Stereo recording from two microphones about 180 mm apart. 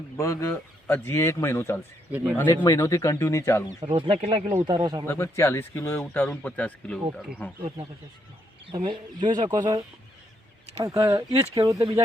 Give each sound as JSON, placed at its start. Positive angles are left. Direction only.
{"t": 0.2, "sound": "speech", "side_deg": 15}
{"t": 2.0, "sound": "speech", "side_deg": -10}
{"t": 2.3, "sound": "speech", "side_deg": 10}
{"t": 3.9, "sound": "speech", "side_deg": -30}
{"t": 4.6, "sound": "speech", "side_deg": -25}
{"t": 5.0, "sound": "speech", "side_deg": 15}
{"t": 8.6, "sound": "speech", "side_deg": -25}
{"t": 10.8, "sound": "speech", "side_deg": -15}